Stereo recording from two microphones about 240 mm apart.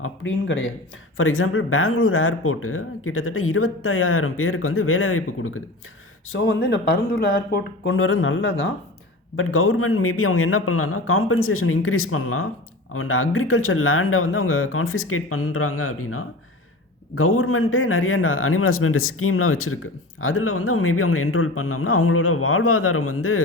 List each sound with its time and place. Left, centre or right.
0.0 s a man's voice: left
6.3 s speech: left
7.9 s a man's voice: left